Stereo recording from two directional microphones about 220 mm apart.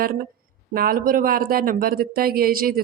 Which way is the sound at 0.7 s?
40° right (ahead or behind).